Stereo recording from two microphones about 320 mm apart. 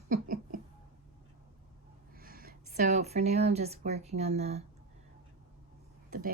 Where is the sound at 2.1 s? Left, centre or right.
Right.